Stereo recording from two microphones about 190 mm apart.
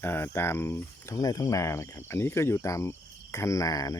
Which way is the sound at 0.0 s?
10° left (ahead or behind).